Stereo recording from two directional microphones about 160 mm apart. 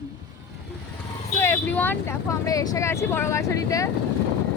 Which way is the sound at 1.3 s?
15° left (ahead or behind).